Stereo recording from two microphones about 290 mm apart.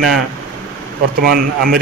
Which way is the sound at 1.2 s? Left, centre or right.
Right.